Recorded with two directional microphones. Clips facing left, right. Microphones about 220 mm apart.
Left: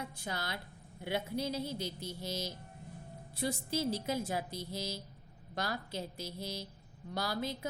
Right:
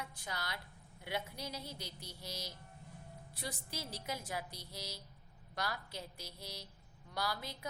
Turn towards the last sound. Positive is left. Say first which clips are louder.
# left 5 dB
turn(degrees=25)  # may be behind; listen again after turning